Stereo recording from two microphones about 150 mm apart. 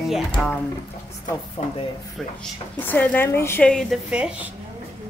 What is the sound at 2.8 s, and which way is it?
Speech, 10° left (ahead or behind).